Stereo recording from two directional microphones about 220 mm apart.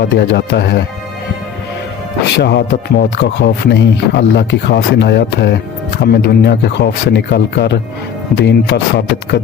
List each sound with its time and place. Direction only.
0.0 s speech: 55° left (ahead or behind)
2.4 s speech: 50° left (ahead or behind)